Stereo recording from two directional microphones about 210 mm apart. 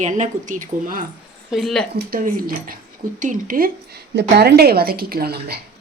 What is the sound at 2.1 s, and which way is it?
Speech, 40° right (ahead or behind).